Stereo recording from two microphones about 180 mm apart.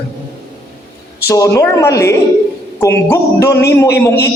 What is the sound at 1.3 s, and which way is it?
Speech, 20° left (ahead or behind).